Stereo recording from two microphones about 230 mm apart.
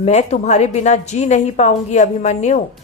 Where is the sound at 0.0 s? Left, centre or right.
Left.